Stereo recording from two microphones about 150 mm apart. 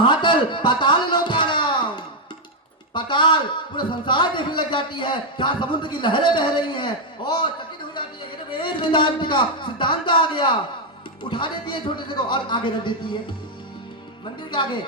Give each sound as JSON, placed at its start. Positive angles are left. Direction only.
{"t": 0.0, "sound": "music", "side_deg": 30}
{"t": 2.9, "sound": "a man's voice", "side_deg": 30}
{"t": 14.5, "sound": "a man's voice", "side_deg": 30}